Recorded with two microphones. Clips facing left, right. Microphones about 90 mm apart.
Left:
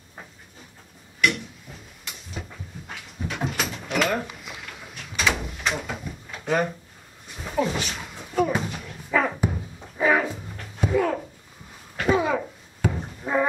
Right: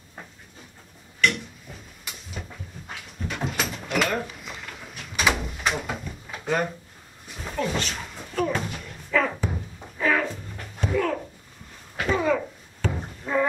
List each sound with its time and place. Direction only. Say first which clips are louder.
1.2 s a sound: even; centre (ahead or behind)
9.1 s music: left 1 dB; 15° left (ahead or behind)
9.9 s dog: left 2 dB; 15° left (ahead or behind)
10.3 s music: even; 5° left (ahead or behind)
12.1 s a sound: left 1 dB; 10° left (ahead or behind)
13.2 s music: left 1 dB; 15° left (ahead or behind)